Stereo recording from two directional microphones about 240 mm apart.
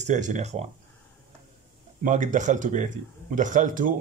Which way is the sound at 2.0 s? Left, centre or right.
Right.